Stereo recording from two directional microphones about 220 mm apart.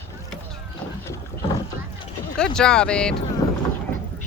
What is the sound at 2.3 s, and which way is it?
Speech, 5° left (ahead or behind).